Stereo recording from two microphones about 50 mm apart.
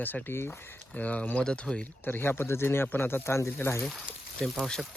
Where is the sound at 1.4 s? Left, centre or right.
Centre.